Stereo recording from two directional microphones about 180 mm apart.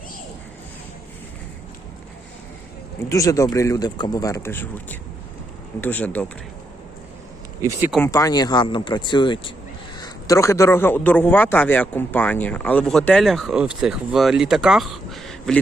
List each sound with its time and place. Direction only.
3.1 s a man's voice: 20° left (ahead or behind)
7.6 s speech: 10° right (ahead or behind)
8.0 s a man's voice: 20° left (ahead or behind); by 15.5 s centre (ahead or behind)